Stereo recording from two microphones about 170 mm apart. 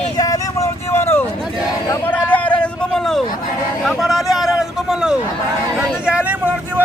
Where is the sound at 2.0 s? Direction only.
10° left (ahead or behind).